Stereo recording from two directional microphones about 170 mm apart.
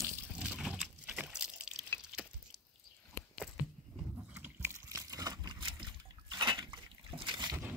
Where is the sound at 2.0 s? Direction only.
5° right (ahead or behind).